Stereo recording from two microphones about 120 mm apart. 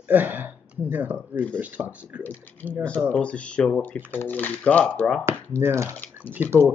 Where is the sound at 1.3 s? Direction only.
10° left (ahead or behind).